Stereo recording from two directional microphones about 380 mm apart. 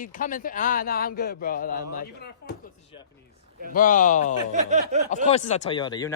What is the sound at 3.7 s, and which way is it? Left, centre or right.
Speech, left.